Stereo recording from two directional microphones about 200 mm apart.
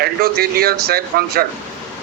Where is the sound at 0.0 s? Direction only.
50° right (ahead or behind).